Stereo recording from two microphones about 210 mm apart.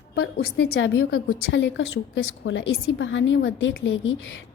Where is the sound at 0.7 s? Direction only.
85° left.